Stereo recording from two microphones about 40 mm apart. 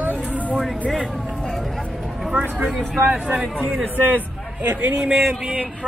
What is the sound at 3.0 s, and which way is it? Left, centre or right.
Speech, right.